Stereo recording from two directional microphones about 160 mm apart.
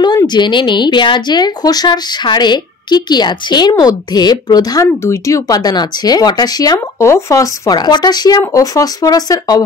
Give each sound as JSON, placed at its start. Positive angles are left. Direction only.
{"t": 0.0, "sound": "speech", "side_deg": 25}